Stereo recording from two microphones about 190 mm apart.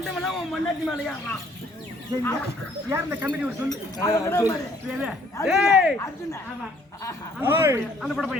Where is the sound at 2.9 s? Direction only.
10° right (ahead or behind).